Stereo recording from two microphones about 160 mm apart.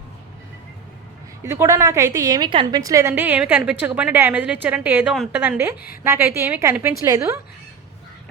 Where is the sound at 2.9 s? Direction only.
15° right (ahead or behind).